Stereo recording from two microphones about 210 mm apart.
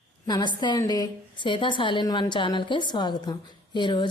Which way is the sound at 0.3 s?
20° left (ahead or behind).